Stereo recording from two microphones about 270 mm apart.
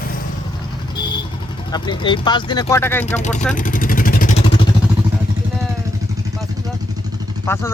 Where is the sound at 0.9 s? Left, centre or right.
Centre.